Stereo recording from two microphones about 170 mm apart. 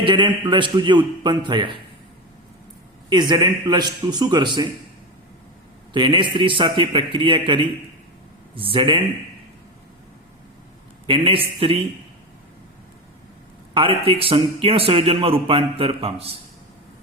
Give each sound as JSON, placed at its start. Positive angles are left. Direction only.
{"t": 0.0, "sound": "a man's voice", "side_deg": -30}
{"t": 3.1, "sound": "a man's voice", "side_deg": -25}
{"t": 5.9, "sound": "a man's voice", "side_deg": -30}
{"t": 11.0, "sound": "a man's voice", "side_deg": -30}
{"t": 13.7, "sound": "a man's voice", "side_deg": -30}